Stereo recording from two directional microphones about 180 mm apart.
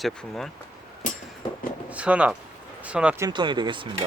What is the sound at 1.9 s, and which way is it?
Speech, 5° right (ahead or behind).